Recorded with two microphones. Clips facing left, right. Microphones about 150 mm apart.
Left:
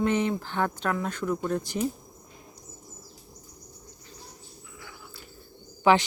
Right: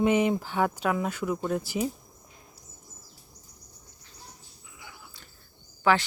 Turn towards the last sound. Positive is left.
turn(degrees=20)  # may be behind; listen again after turning